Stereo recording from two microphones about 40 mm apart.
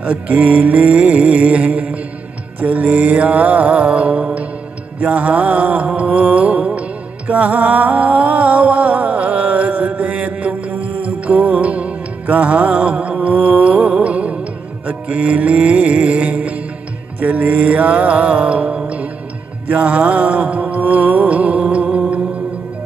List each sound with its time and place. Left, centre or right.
0.0 s mantra: right
5.0 s music: right
17.2 s mantra: right
19.7 s music: right